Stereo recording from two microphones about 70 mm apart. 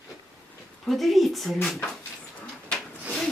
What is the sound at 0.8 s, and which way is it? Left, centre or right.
Speech, centre.